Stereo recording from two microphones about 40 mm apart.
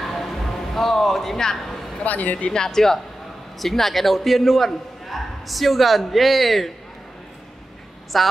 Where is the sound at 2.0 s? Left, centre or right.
Left.